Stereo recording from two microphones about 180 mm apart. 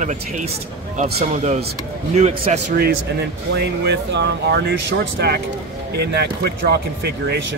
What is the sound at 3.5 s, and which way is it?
Speech, 65° right (ahead or behind).